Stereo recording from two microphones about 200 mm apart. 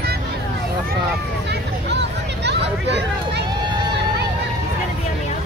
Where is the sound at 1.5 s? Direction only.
60° right (ahead or behind).